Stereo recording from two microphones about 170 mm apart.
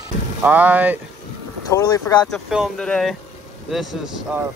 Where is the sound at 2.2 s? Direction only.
Centre (ahead or behind).